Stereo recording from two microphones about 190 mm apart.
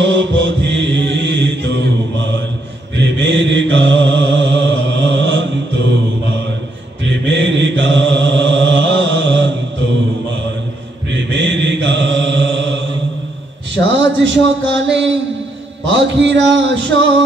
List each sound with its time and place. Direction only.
0.0 s mantra: 75° right (ahead or behind)
7.1 s mantra: 70° right (ahead or behind)
11.1 s mantra: 70° right (ahead or behind)
13.7 s a sound: 75° right (ahead or behind)
15.9 s music: 70° right (ahead or behind)